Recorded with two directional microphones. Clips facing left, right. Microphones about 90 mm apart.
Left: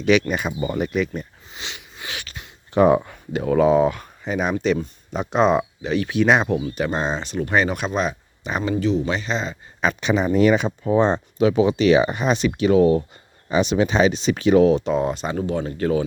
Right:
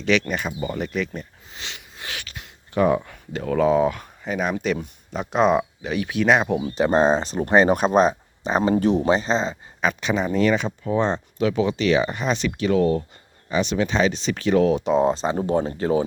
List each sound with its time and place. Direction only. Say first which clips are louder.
0.0 s speech: left 3 dB; 10° left (ahead or behind)
2.7 s speech: left 4 dB; 25° left (ahead or behind)
3.1 s speech: left 4 dB; 10° left (ahead or behind)
6.6 s speech: right 5 dB; 30° right (ahead or behind)
8.7 s speech: left 2 dB; 55° right (ahead or behind)
9.0 s speech: right 4 dB; 35° right (ahead or behind)
9.8 s speech: left 2 dB; centre (ahead or behind)
14.8 s speech: right 3 dB; 20° right (ahead or behind)
15.8 s speech: left 3 dB; 25° right (ahead or behind)